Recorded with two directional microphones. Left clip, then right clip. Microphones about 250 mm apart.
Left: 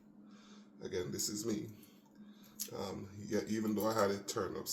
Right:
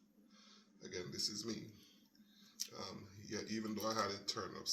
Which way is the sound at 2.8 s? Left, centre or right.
Right.